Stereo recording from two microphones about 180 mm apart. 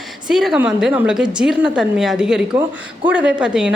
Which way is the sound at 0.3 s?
5° right (ahead or behind).